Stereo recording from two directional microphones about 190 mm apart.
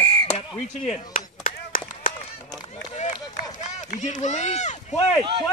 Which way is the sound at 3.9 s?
40° left (ahead or behind).